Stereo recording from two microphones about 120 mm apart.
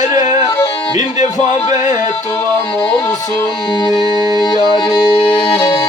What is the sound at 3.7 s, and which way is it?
Music, 40° left (ahead or behind).